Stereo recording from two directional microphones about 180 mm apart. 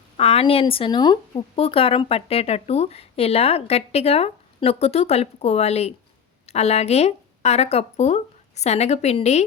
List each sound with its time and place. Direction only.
0.2 s speech: 35° left (ahead or behind)